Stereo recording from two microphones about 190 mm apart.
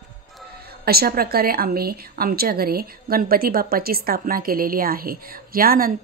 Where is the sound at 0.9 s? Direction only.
55° right (ahead or behind).